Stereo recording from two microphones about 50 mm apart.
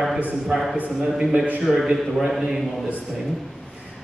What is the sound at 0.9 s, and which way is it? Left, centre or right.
Speech, right.